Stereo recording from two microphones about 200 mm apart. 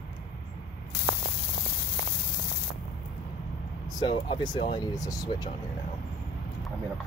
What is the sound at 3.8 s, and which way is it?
Speech, 20° left (ahead or behind).